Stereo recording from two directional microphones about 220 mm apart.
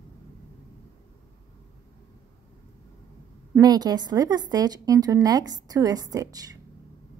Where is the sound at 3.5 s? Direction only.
15° right (ahead or behind).